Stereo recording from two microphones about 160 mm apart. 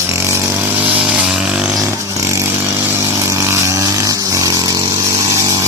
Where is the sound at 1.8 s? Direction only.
20° right (ahead or behind).